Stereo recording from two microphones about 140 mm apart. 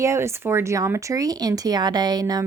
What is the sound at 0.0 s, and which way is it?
Speech, 20° right (ahead or behind).